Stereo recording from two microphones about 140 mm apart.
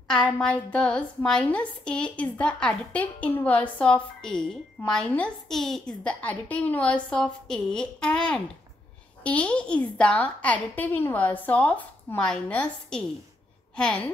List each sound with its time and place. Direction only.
0.1 s a woman's voice: 5° left (ahead or behind)